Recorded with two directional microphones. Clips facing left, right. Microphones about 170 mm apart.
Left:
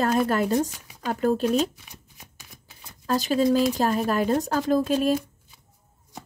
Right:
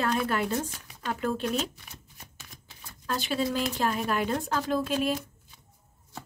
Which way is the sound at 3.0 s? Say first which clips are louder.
Left 8 dB; 40° left (ahead or behind).